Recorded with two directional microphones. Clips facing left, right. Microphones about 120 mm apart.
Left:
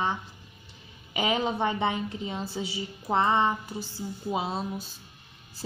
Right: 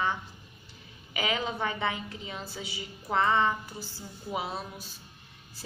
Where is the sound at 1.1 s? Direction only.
25° left (ahead or behind).